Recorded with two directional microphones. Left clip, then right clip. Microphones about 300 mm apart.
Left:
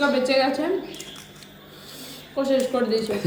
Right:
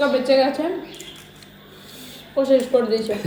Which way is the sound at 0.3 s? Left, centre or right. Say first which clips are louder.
Right 4 dB; centre.